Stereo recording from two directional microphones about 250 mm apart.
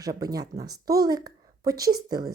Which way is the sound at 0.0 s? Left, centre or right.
Centre.